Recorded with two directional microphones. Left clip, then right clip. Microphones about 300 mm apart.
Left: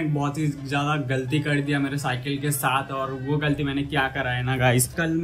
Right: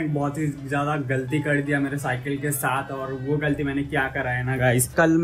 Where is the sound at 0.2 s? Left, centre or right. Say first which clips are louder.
Right 1 dB; centre.